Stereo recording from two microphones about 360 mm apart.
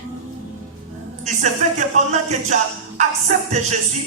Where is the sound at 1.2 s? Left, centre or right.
Centre.